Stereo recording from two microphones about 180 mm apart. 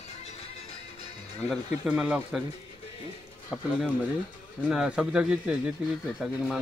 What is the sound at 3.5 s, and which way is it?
Speech, 5° right (ahead or behind).